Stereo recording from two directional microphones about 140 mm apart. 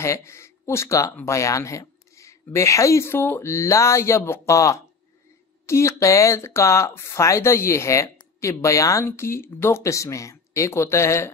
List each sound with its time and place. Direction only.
0.0 s speech: 20° left (ahead or behind)